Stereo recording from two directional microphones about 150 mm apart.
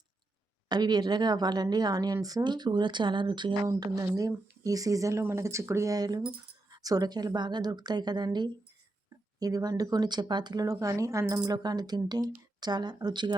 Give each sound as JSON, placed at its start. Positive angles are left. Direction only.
{"t": 0.7, "sound": "a woman's voice", "side_deg": -30}